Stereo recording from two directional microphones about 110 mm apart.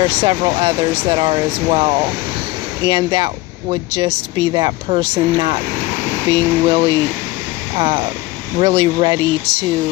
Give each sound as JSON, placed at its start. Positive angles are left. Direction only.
{"t": 0.1, "sound": "speech", "side_deg": -50}